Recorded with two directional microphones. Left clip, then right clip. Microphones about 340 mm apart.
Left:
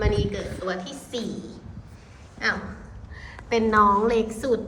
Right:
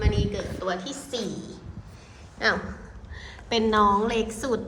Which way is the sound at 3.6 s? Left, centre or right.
Centre.